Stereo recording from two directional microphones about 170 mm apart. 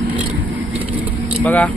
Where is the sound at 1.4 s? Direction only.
10° left (ahead or behind).